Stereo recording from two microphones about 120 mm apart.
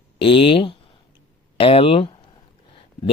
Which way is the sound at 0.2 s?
50° left (ahead or behind).